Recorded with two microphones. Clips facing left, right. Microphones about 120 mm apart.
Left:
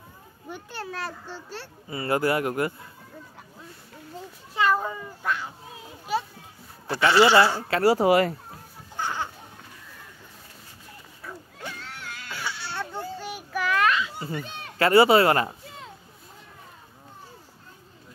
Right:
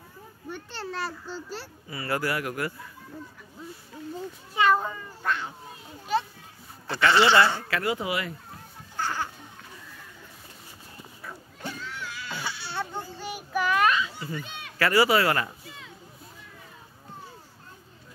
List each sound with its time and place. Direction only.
0.5 s speech: 5° left (ahead or behind)
1.9 s speech: 25° left (ahead or behind)
4.6 s speech: centre (ahead or behind)
6.9 s speech: 10° left (ahead or behind)
7.6 s speech: 30° left (ahead or behind)
8.9 s music: 20° left (ahead or behind)
11.8 s music: 60° left (ahead or behind)
12.3 s baby cry: 15° right (ahead or behind)
13.3 s child singing: 10° right (ahead or behind)
14.2 s speech: 35° left (ahead or behind)